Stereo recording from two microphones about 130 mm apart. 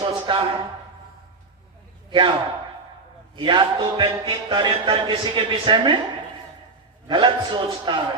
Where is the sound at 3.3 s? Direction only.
35° right (ahead or behind).